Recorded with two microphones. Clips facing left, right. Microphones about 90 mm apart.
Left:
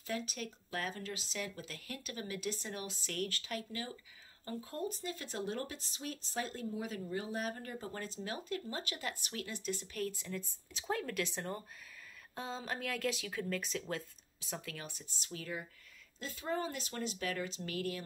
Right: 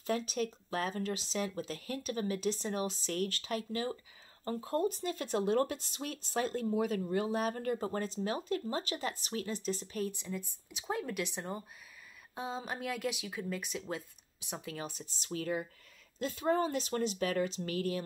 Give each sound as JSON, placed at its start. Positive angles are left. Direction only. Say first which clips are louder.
{"t": 0.3, "sound": "speech", "louder": "right 7 dB", "side_deg": -35}
{"t": 7.8, "sound": "speech", "louder": "right 8 dB", "side_deg": -40}
{"t": 15.2, "sound": "speech", "louder": "right 8 dB", "side_deg": -40}